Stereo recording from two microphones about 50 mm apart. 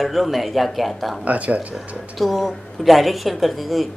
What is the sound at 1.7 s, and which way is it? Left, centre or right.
Speech, centre.